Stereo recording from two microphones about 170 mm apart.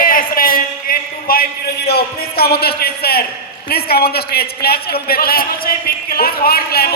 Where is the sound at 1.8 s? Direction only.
70° left (ahead or behind).